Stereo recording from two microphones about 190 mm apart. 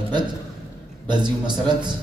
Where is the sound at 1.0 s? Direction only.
25° right (ahead or behind).